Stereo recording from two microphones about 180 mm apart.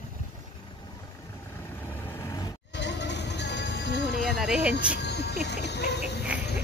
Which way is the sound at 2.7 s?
75° left (ahead or behind).